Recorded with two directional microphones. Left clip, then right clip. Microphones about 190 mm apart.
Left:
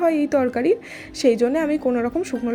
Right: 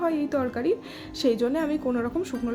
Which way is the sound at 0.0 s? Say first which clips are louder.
Left 7 dB; 25° left (ahead or behind).